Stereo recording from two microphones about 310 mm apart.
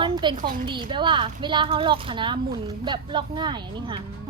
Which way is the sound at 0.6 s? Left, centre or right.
Centre.